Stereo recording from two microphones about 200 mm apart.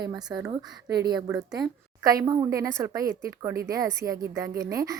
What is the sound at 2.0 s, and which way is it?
Speech, 15° right (ahead or behind).